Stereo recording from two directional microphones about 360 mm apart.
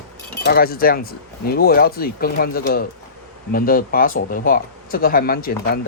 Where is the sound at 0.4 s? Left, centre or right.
Left.